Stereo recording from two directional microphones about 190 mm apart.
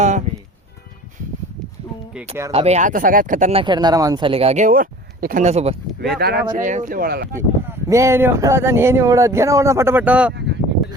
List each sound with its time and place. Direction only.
2.5 s speech: 35° right (ahead or behind)
3.6 s speech: 25° right (ahead or behind)
6.0 s speech: 60° right (ahead or behind)
7.3 s speech: 15° right (ahead or behind)
10.3 s a sound: 65° right (ahead or behind)